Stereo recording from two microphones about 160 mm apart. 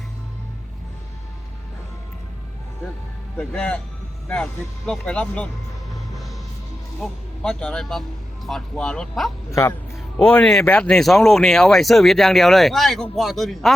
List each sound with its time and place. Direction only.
3.3 s speech: 10° left (ahead or behind)
4.9 s speech: 5° left (ahead or behind)
7.0 s speech: 5° left (ahead or behind)
9.5 s speech: 20° left (ahead or behind)
10.3 s speech: 5° left (ahead or behind)